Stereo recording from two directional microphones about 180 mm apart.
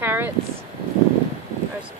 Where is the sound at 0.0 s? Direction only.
10° right (ahead or behind).